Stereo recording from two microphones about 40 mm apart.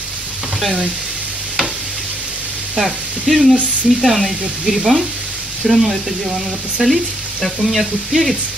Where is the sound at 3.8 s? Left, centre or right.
Centre.